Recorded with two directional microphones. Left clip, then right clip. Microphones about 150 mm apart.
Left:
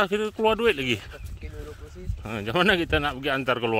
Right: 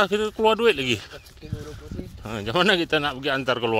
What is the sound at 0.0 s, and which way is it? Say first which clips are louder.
Speech: right 3 dB; centre (ahead or behind).